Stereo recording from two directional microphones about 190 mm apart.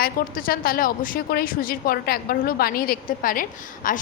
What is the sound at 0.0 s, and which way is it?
A woman's voice, 50° left (ahead or behind).